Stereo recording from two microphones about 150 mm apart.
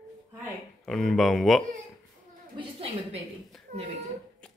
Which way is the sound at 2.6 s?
40° right (ahead or behind).